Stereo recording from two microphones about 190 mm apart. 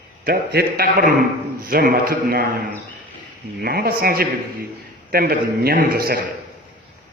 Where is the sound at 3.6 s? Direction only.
55° right (ahead or behind).